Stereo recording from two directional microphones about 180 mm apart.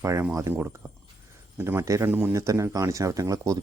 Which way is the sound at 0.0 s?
15° right (ahead or behind).